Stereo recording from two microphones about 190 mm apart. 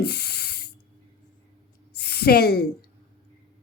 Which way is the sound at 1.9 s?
55° left (ahead or behind).